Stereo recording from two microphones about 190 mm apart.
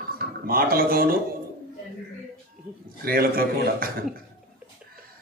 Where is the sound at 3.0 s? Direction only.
50° right (ahead or behind).